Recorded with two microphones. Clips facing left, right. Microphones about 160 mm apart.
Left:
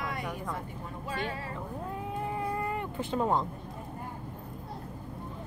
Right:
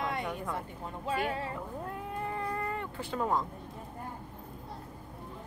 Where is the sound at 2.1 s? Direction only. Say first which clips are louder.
Left 2 dB; 5° left (ahead or behind); by 3.4 s 25° left (ahead or behind).